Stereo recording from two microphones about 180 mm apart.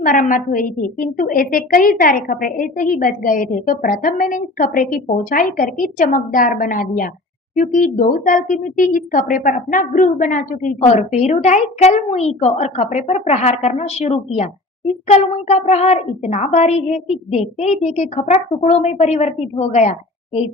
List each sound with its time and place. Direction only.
0.0 s a woman's voice: 45° left (ahead or behind)